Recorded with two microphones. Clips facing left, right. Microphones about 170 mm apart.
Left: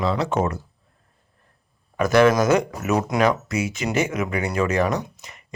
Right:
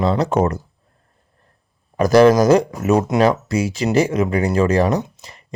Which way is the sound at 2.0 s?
35° right (ahead or behind).